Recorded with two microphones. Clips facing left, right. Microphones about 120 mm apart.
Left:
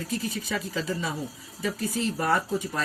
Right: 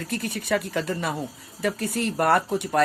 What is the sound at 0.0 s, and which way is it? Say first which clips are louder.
Speech: right 1 dB; 65° right (ahead or behind).